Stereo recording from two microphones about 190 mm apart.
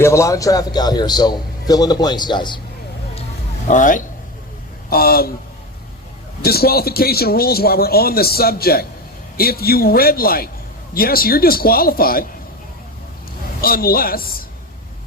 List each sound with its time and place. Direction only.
0.0 s a man's voice: 15° left (ahead or behind)
3.7 s a man's voice: 45° left (ahead or behind)
6.4 s a man's voice: 55° left (ahead or behind)
13.6 s a man's voice: 50° left (ahead or behind)